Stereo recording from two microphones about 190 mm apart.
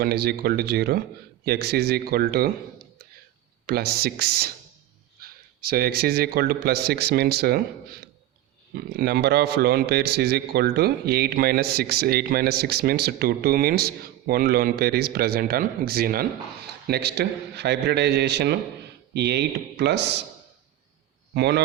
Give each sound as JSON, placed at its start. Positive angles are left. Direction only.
{"t": 0.0, "sound": "a man's voice", "side_deg": -55}
{"t": 3.7, "sound": "a man's voice", "side_deg": -55}
{"t": 21.3, "sound": "a man's voice", "side_deg": -60}